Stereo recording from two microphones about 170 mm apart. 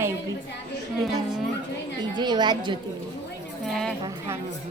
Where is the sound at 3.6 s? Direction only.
Centre (ahead or behind).